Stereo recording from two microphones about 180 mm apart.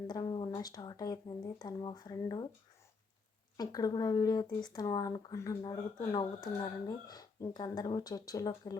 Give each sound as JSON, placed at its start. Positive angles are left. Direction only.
{"t": 0.1, "sound": "speech", "side_deg": 25}
{"t": 3.6, "sound": "speech", "side_deg": 20}